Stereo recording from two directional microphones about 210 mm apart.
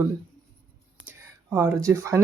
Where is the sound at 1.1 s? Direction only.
15° right (ahead or behind).